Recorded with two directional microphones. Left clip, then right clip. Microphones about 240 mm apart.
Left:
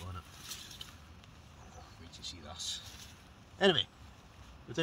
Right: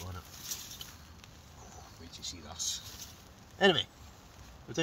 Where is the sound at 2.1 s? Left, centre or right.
Centre.